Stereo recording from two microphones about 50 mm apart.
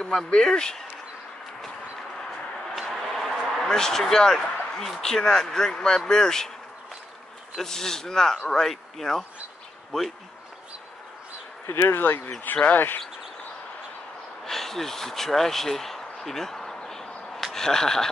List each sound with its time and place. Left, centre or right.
0.0 s a man's voice: centre
2.7 s a sound: centre
3.5 s a man's voice: centre
7.5 s a man's voice: centre
11.6 s speech: left
14.4 s a sound: centre
17.5 s speech: centre